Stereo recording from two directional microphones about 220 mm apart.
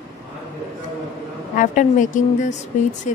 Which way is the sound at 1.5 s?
35° left (ahead or behind).